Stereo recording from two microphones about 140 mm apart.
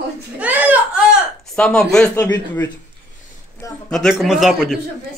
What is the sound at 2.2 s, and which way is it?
Speech, 15° left (ahead or behind).